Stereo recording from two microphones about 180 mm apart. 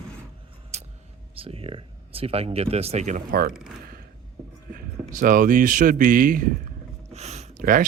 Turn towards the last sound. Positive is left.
turn(degrees=-50)  # may be behind; listen again after turning